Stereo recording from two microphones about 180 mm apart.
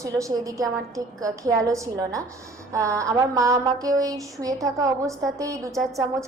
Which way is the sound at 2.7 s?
15° right (ahead or behind).